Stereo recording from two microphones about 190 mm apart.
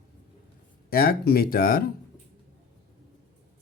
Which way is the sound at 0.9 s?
50° left (ahead or behind).